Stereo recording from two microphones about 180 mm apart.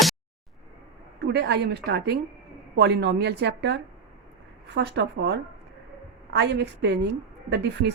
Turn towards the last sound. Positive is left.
turn(degrees=-70)  # may be behind; listen again after turning